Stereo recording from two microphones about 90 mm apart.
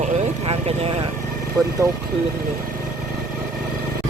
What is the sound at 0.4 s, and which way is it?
Vehicle, 90° right.